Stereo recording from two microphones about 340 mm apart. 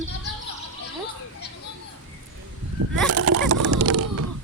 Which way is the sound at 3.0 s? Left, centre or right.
Right.